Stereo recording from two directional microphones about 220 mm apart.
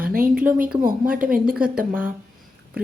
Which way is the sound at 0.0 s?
40° right (ahead or behind).